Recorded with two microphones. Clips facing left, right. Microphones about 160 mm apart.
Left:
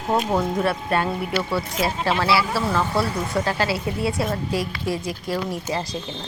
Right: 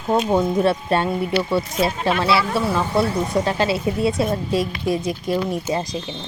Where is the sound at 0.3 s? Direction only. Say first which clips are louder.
Right 4 dB; 20° right (ahead or behind).